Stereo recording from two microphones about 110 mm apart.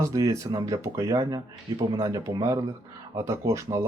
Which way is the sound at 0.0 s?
30° right (ahead or behind).